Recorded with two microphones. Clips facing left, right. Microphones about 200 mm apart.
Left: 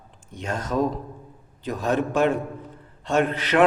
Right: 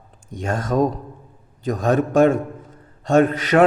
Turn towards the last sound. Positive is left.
turn(degrees=-45)  # may be behind; listen again after turning